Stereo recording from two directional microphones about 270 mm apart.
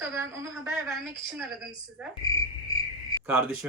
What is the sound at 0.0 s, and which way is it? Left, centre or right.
Speech, centre.